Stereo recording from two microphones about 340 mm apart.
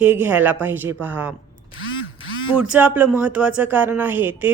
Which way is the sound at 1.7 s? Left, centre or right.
Left.